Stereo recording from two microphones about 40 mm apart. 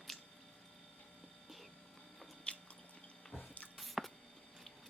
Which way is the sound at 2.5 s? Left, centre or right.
Left.